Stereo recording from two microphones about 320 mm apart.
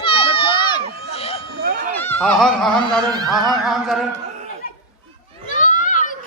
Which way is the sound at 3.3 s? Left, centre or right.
Centre.